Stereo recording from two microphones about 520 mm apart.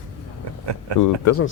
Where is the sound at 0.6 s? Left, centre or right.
Right.